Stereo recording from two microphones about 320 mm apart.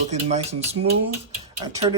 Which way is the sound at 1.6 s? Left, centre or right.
Centre.